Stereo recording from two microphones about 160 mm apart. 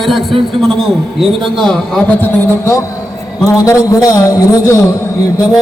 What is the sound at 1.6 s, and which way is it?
A man's voice, 10° left (ahead or behind).